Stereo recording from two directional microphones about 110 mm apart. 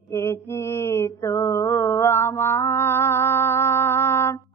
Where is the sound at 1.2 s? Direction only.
25° left (ahead or behind).